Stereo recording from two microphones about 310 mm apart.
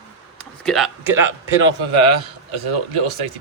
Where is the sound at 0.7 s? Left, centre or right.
Centre.